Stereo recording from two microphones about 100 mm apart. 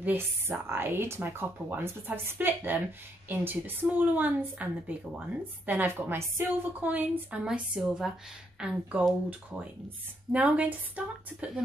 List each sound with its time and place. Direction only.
0.0 s a woman's voice: 20° right (ahead or behind)
10.3 s a woman's voice: 10° right (ahead or behind)